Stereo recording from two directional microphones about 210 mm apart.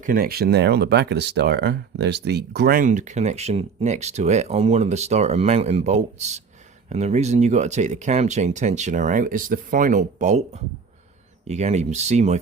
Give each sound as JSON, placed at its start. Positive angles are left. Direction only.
{"t": 0.0, "sound": "speech", "side_deg": -45}